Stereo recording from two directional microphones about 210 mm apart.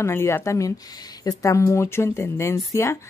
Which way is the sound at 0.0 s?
10° left (ahead or behind).